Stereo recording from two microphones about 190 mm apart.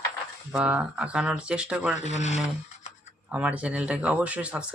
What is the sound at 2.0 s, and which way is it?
Speech, 35° left (ahead or behind).